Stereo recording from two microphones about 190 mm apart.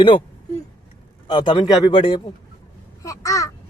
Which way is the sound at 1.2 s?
25° left (ahead or behind).